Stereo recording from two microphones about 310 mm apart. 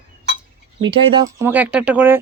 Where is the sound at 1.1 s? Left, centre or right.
Centre.